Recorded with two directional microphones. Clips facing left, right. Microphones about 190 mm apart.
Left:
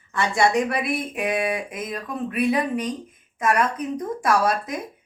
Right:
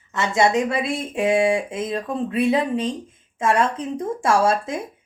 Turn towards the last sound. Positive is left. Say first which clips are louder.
# right 3 dB
turn(degrees=-25)  # may be behind; listen again after turning